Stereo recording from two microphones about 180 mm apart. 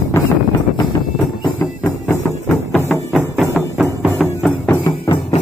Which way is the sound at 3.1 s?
5° right (ahead or behind).